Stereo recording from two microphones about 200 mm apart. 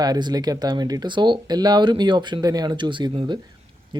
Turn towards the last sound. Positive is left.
turn(degrees=-20)  # may be behind; listen again after turning